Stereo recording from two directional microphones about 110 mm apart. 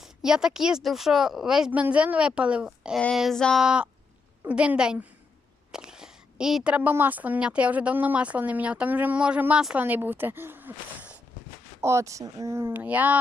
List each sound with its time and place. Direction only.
0.0 s speech: 5° right (ahead or behind)
3.2 s a sound: centre (ahead or behind)
3.6 s speech: 10° right (ahead or behind)
11.8 s speech: 25° right (ahead or behind)